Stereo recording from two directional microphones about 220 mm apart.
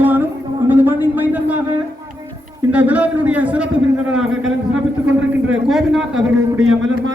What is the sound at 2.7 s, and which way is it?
A woman's voice, 5° right (ahead or behind).